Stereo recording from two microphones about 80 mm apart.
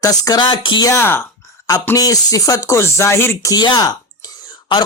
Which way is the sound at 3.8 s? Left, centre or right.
Left.